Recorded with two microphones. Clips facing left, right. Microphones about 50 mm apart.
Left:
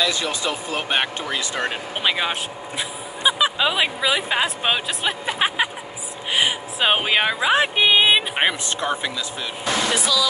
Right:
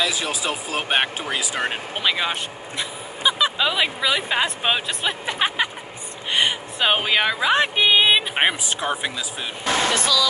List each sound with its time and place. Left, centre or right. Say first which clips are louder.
0.0 s speech: left 1 dB; centre
1.3 s speech: even; right
2.0 s speech: left 1 dB; centre
6.3 s a sound: even; centre
7.0 s speech: even; centre
8.4 s speech: even; centre
9.9 s speech: right 1 dB; centre